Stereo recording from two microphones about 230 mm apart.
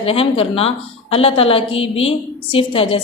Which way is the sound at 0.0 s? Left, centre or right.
Left.